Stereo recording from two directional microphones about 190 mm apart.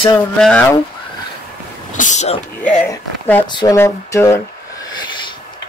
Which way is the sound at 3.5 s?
25° left (ahead or behind).